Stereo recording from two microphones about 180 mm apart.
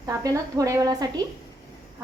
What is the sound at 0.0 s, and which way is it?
A woman's voice, 20° right (ahead or behind).